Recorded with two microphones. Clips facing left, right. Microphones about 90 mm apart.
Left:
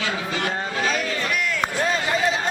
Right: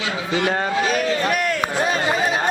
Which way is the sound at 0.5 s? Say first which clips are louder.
Right 4 dB; 55° right (ahead or behind).